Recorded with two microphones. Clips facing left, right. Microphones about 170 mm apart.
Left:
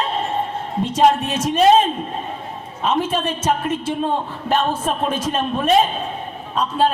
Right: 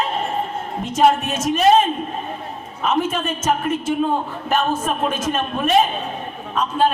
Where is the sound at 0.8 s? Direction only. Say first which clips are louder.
Left 1 dB; 30° left (ahead or behind).